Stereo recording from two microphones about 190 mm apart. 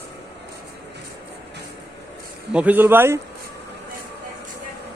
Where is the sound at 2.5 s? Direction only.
5° right (ahead or behind).